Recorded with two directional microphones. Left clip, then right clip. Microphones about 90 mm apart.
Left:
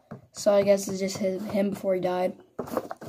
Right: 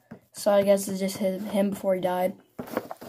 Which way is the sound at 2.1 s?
Centre (ahead or behind).